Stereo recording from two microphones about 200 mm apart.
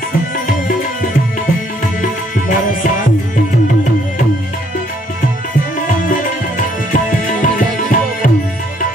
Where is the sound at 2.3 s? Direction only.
40° left (ahead or behind).